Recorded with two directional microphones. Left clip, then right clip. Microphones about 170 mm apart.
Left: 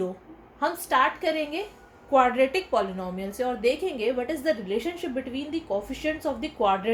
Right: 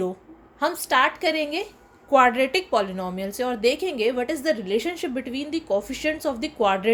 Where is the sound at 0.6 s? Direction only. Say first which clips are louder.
Right 2 dB; 50° right (ahead or behind).